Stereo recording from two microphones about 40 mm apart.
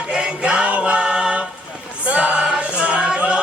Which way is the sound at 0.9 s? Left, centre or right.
Right.